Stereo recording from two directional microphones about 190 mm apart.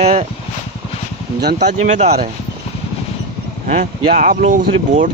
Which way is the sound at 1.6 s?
40° right (ahead or behind).